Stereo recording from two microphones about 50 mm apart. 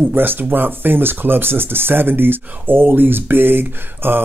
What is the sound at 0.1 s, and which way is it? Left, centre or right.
Speech, right.